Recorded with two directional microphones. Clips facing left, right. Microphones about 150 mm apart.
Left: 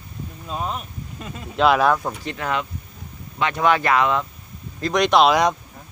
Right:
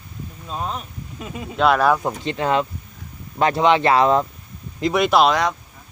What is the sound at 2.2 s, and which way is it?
Speech, 25° right (ahead or behind).